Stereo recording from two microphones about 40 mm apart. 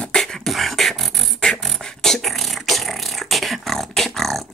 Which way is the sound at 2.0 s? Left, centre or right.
Centre.